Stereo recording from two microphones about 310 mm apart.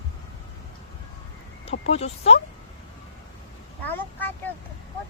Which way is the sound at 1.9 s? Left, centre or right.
Centre.